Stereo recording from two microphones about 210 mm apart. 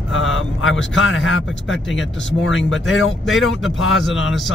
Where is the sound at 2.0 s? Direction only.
Centre (ahead or behind).